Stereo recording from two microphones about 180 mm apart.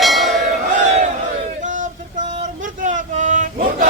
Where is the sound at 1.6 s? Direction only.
45° right (ahead or behind).